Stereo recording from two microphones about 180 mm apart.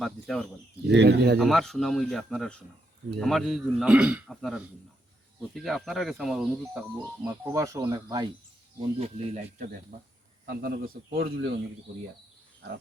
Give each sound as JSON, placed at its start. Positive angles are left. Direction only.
{"t": 0.0, "sound": "speech", "side_deg": 0}
{"t": 0.9, "sound": "a man's voice", "side_deg": -70}
{"t": 1.4, "sound": "speech", "side_deg": 0}
{"t": 8.8, "sound": "speech", "side_deg": -40}
{"t": 10.4, "sound": "a man's voice", "side_deg": -55}